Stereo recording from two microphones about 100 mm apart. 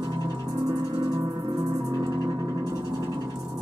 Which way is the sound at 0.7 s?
45° right (ahead or behind).